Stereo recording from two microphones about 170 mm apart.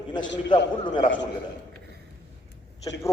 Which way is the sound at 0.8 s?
30° left (ahead or behind).